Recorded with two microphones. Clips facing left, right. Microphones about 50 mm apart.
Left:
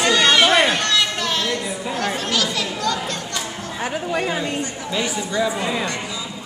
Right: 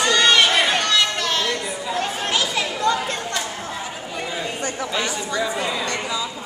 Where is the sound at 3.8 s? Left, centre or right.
Left.